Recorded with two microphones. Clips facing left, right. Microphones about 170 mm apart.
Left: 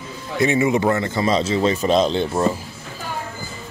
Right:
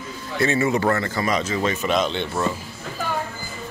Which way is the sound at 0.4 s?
15° left (ahead or behind).